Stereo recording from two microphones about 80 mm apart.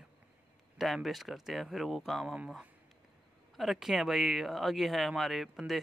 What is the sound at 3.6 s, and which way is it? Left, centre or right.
Speech, centre.